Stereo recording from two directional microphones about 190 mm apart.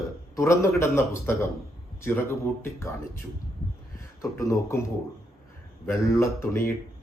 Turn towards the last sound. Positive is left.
turn(degrees=15)  # may be behind; listen again after turning